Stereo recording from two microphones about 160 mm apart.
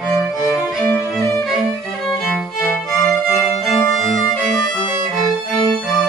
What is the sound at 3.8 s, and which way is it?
Violin, 20° left (ahead or behind).